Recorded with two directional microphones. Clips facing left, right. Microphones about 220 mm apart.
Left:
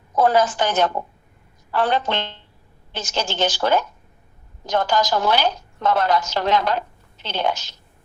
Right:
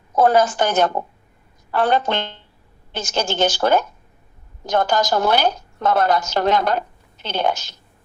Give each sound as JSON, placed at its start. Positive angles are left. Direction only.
{"t": 0.2, "sound": "a woman's voice", "side_deg": -50}